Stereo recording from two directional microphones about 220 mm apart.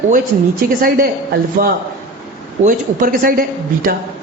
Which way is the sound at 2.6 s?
40° right (ahead or behind).